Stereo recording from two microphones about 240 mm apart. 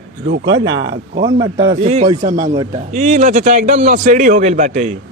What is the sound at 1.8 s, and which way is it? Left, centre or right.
A man's voice, right.